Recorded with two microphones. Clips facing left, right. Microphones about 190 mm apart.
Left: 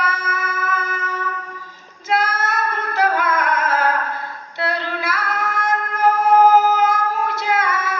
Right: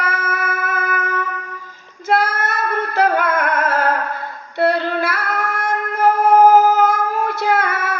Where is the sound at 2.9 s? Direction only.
60° right (ahead or behind).